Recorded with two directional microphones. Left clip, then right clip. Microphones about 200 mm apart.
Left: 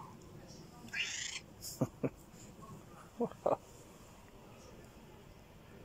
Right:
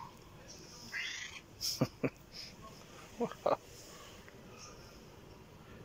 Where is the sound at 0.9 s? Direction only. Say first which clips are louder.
Left 1 dB; 5° left (ahead or behind).